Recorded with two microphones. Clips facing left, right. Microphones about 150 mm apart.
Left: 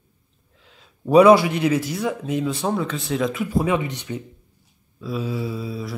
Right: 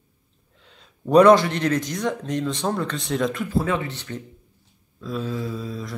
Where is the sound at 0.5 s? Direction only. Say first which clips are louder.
Even; centre (ahead or behind).